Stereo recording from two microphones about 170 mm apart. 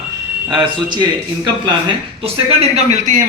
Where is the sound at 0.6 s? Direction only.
25° right (ahead or behind).